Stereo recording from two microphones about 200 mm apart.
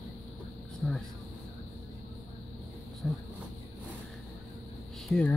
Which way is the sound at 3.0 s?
5° left (ahead or behind).